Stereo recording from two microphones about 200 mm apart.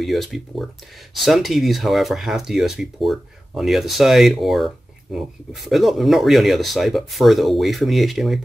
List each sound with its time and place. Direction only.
0.0 s speech: centre (ahead or behind)